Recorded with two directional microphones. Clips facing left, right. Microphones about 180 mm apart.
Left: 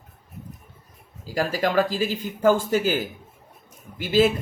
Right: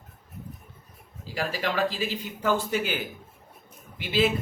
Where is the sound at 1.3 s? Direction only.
45° left (ahead or behind).